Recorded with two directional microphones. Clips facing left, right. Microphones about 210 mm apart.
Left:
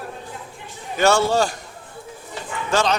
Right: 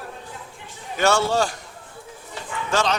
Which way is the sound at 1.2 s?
40° left (ahead or behind).